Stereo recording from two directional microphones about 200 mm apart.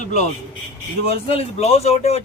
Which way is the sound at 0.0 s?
35° left (ahead or behind).